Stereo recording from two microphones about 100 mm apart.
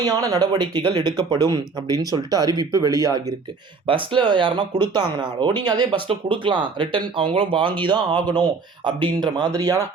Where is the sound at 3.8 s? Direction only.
55° right (ahead or behind).